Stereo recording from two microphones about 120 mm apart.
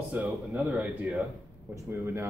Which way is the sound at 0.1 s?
10° right (ahead or behind).